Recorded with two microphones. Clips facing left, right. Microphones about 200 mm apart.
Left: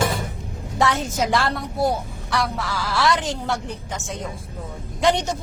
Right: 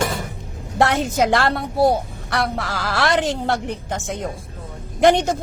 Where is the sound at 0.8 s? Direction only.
60° right (ahead or behind).